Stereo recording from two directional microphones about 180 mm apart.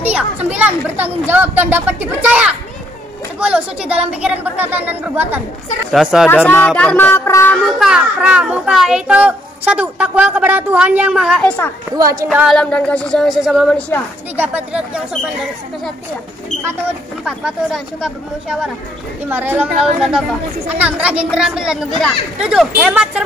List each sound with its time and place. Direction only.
0.0 s a child's voice: 10° right (ahead or behind)
6.2 s speech: 10° left (ahead or behind)
7.6 s a child's voice: 5° right (ahead or behind)
12.0 s speech: 20° right (ahead or behind)
12.3 s a child's voice: 5° right (ahead or behind)
12.5 s a child's voice: 5° left (ahead or behind)
14.3 s speech: 10° right (ahead or behind)
17.2 s a child's voice: 5° right (ahead or behind)